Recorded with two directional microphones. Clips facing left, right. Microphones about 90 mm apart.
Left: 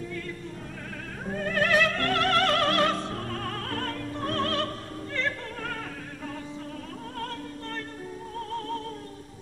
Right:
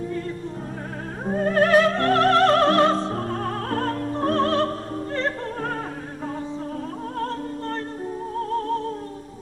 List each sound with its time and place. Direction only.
1.2 s opera: 35° right (ahead or behind)
8.4 s music: 35° right (ahead or behind)